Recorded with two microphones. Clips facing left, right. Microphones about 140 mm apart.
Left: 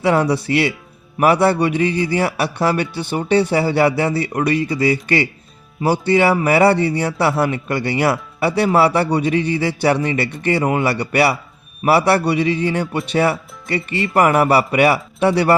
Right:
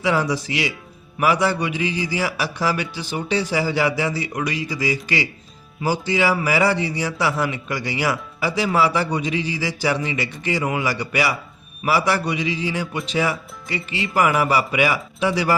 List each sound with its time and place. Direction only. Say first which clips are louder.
0.0 s a man's voice: left 5 dB; 60° left (ahead or behind)
10.6 s a man's voice: left 5 dB; 40° left (ahead or behind)
10.8 s a man's voice: left 6 dB; 65° left (ahead or behind)